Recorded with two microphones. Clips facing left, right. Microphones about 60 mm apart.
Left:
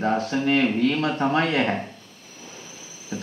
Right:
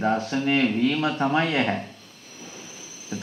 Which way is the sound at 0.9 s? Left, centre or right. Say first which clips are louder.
Left 1 dB; left.